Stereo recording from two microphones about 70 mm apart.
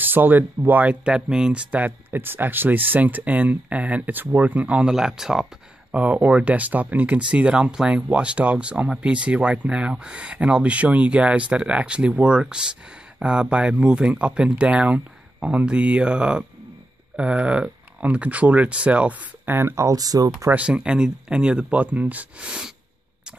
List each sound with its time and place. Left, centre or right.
0.0 s speech: right; by 5.9 s centre
5.9 s speech: right
19.4 s speech: right
20.0 s speech: right
20.5 s speech: centre